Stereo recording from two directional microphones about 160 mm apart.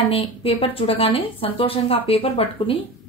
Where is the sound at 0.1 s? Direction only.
35° left (ahead or behind).